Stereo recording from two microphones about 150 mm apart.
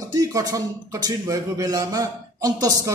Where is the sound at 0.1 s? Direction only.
25° right (ahead or behind).